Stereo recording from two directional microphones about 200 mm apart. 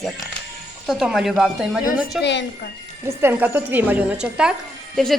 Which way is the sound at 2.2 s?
60° left (ahead or behind).